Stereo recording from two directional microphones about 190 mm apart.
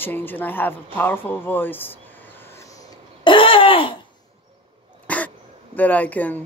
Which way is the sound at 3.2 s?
25° left (ahead or behind).